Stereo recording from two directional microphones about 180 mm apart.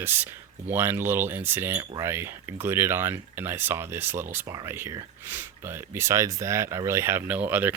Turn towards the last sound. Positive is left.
turn(degrees=-10)  # may be behind; listen again after turning